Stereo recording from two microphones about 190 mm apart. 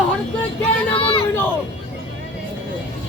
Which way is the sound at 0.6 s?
30° left (ahead or behind).